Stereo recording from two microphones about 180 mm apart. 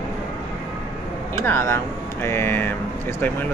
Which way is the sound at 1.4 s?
15° left (ahead or behind).